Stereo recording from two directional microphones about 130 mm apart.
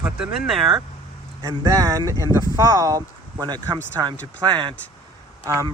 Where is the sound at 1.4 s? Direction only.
25° right (ahead or behind).